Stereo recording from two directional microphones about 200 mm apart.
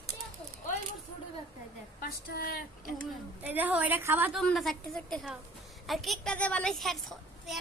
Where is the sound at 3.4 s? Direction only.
10° right (ahead or behind).